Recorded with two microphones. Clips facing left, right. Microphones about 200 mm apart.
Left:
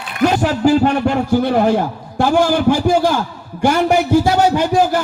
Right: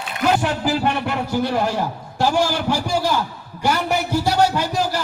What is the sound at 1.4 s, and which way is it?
A man's voice, 55° left (ahead or behind).